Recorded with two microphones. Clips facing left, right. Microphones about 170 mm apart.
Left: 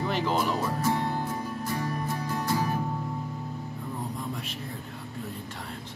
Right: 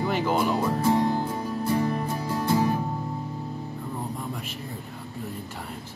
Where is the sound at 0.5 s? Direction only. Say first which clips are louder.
Right 4 dB; 30° right (ahead or behind).